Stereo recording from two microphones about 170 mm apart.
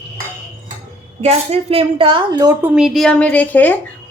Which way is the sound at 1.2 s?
35° right (ahead or behind).